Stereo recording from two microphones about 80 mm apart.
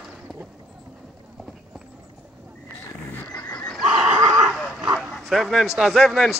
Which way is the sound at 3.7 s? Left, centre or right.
Centre.